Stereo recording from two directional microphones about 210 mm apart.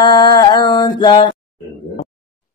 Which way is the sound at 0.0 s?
20° left (ahead or behind).